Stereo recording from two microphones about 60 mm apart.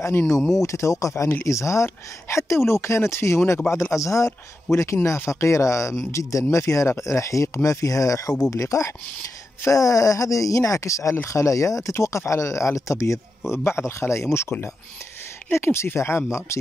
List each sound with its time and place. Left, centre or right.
0.6 s speech: left
3.9 s speech: left
13.5 s speech: left
15.5 s speech: left